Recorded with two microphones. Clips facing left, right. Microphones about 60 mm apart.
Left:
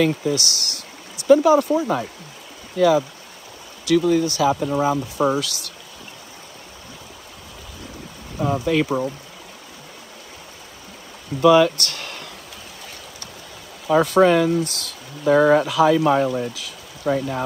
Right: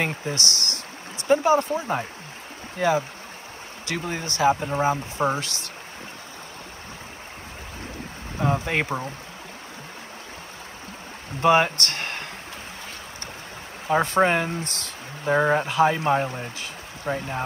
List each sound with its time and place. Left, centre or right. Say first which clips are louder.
0.0 s speech: left 7 dB; right
8.4 s speech: left 4 dB; right
11.4 s speech: left 5 dB; right
13.8 s speech: left 5 dB; right
15.3 s speech: left 6 dB; centre
15.6 s speech: left 4 dB; right